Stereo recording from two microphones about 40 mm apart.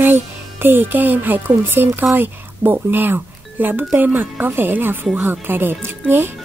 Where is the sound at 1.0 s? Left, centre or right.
Right.